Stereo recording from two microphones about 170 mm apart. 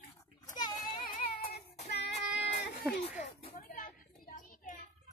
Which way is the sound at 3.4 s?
35° left (ahead or behind).